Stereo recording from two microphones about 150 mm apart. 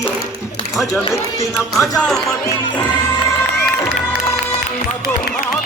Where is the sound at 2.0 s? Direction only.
Centre (ahead or behind).